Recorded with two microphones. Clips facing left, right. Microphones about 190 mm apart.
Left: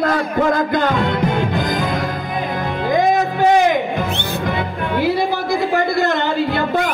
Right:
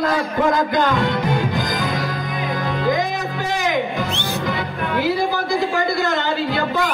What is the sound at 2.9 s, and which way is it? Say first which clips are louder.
Music: left 7 dB; 55° left (ahead or behind).